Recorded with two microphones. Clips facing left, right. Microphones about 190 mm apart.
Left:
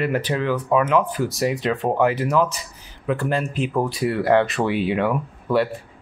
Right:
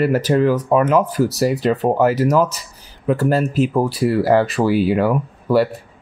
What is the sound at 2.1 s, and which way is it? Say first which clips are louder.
Speech: right 5 dB; 40° right (ahead or behind).